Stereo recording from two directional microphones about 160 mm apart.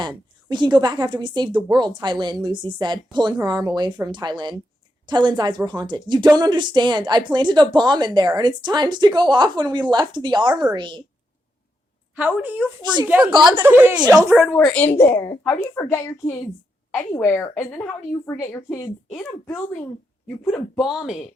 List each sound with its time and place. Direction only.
0.0 s speech: 25° right (ahead or behind)
12.4 s speech: 10° right (ahead or behind)
14.3 s a woman's voice: 5° right (ahead or behind); by 18.9 s 15° left (ahead or behind)
20.5 s speech: centre (ahead or behind)